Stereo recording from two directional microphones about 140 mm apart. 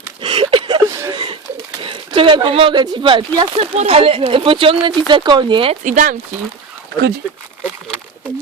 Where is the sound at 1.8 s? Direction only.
40° right (ahead or behind).